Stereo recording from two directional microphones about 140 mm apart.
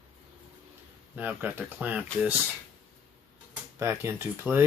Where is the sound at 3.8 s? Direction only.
20° right (ahead or behind).